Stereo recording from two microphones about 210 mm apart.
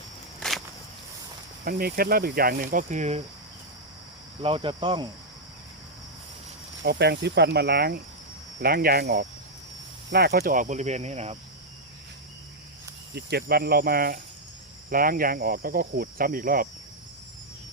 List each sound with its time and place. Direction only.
0.3 s a sound: centre (ahead or behind)
1.6 s speech: 45° right (ahead or behind)
4.4 s speech: 25° right (ahead or behind)
6.8 s speech: 50° right (ahead or behind); by 11.3 s 30° right (ahead or behind)
13.1 s speech: 50° right (ahead or behind)